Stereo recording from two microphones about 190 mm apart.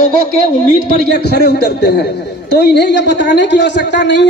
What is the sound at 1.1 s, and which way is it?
A man's voice, 60° left (ahead or behind).